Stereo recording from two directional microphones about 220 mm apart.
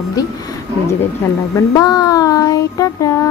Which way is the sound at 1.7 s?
15° left (ahead or behind).